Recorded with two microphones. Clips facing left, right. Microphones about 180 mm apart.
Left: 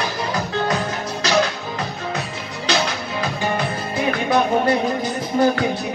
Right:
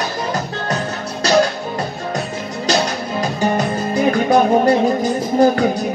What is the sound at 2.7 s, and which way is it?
Music, 45° right (ahead or behind).